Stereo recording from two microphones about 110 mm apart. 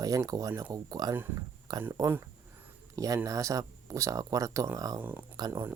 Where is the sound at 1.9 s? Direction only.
25° right (ahead or behind).